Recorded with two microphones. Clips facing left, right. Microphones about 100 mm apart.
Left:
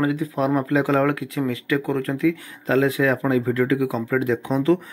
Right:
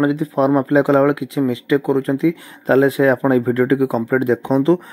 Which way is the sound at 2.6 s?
35° right (ahead or behind).